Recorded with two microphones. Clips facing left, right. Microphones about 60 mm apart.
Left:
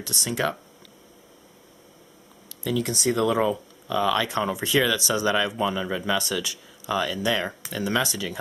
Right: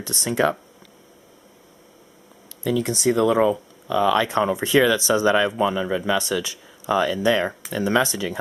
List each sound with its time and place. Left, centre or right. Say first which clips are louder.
0.0 s speech: right 5 dB; right
2.7 s speech: right 4 dB; centre
6.9 s speech: right 5 dB; right